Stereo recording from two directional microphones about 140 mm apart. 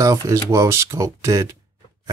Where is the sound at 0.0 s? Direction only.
20° right (ahead or behind).